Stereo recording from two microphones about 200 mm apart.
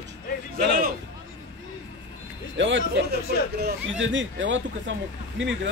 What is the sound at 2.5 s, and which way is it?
Speech, 65° right (ahead or behind).